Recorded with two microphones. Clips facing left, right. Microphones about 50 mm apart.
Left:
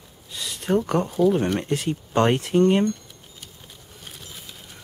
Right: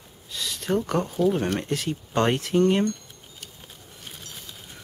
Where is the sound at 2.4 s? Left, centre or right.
Centre.